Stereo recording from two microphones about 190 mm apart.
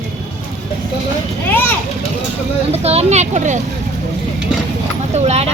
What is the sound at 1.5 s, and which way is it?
Speech, 10° left (ahead or behind).